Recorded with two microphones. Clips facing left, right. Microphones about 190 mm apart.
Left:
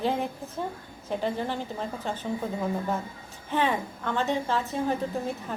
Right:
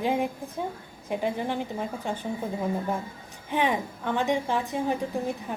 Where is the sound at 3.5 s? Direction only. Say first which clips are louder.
Right 1 dB; 15° right (ahead or behind).